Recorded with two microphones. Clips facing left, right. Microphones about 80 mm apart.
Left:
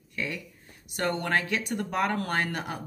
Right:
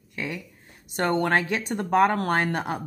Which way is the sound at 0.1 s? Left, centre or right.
Right.